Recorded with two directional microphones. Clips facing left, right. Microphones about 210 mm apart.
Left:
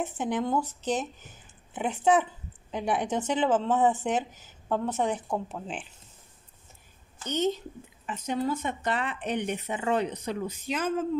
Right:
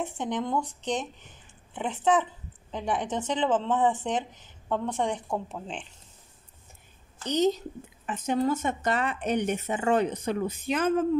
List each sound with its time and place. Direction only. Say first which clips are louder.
0.0 s speech: left 1 dB; 5° left (ahead or behind)
7.2 s a woman's voice: right 3 dB; 40° right (ahead or behind)
8.1 s speech: right 3 dB; 50° right (ahead or behind)